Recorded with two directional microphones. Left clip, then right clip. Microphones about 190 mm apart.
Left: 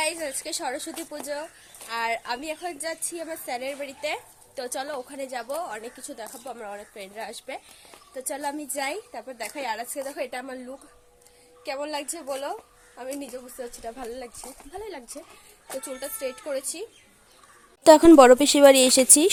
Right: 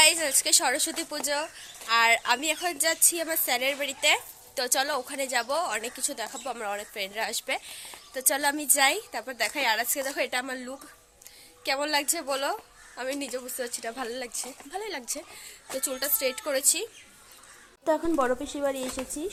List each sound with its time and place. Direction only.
0.0 s a woman's voice: 5° right (ahead or behind)
17.8 s a woman's voice: 70° left (ahead or behind)